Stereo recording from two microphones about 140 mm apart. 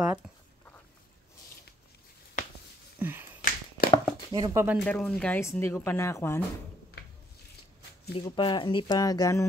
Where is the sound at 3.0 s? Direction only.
15° right (ahead or behind).